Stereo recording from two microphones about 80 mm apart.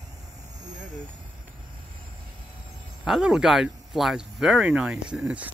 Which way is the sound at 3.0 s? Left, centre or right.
Centre.